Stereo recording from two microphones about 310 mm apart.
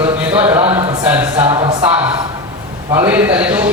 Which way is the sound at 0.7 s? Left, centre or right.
Centre.